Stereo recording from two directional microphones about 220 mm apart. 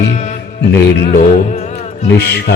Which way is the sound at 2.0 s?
50° left (ahead or behind).